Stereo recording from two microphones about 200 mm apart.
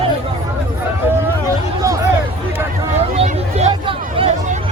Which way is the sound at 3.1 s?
35° right (ahead or behind).